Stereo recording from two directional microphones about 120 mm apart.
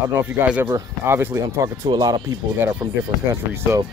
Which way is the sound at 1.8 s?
35° right (ahead or behind).